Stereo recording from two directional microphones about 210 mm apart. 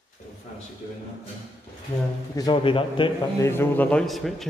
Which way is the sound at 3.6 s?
5° left (ahead or behind).